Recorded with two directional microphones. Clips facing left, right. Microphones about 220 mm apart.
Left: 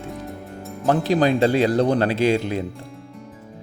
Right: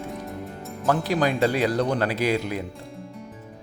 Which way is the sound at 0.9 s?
25° left (ahead or behind).